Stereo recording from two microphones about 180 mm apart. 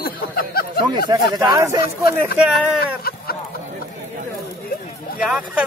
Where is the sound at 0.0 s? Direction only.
55° left (ahead or behind).